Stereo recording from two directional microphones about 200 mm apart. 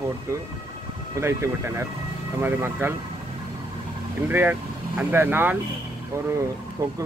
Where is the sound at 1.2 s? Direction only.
15° right (ahead or behind).